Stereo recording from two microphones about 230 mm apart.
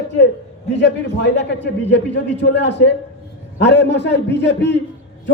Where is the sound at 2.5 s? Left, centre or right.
Left.